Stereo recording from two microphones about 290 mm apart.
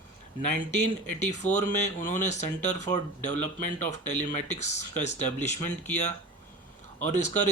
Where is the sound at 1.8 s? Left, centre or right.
Left.